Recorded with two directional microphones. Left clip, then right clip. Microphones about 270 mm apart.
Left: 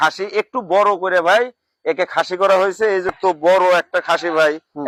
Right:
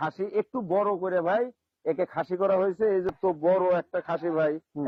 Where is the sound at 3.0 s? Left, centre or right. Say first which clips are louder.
Left 9 dB; centre.